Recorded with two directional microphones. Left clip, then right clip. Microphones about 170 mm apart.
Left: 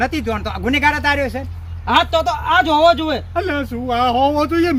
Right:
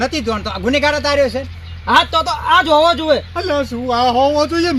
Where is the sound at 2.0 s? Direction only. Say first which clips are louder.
Right 2 dB; 65° left (ahead or behind).